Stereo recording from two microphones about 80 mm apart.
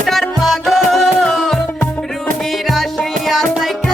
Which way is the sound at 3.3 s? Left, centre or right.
Centre.